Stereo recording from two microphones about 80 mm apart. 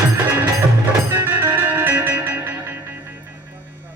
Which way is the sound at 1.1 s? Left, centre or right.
Right.